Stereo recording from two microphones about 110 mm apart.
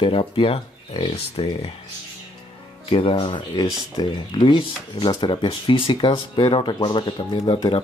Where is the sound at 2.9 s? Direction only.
55° left (ahead or behind).